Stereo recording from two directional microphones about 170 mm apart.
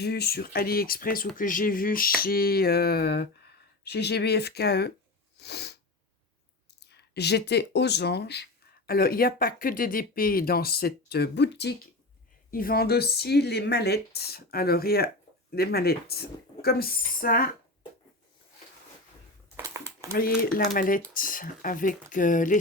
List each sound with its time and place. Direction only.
0.0 s speech: 70° left (ahead or behind)
5.4 s sneeze: 75° left (ahead or behind)
6.7 s speech: 75° left (ahead or behind)
8.9 s speech: 60° left (ahead or behind); by 11.7 s 85° left
12.5 s speech: 60° left (ahead or behind)
19.5 s a sound: 15° right (ahead or behind)
20.1 s speech: 60° left (ahead or behind)